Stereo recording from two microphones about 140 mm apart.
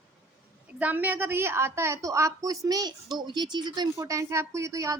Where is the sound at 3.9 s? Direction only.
20° right (ahead or behind).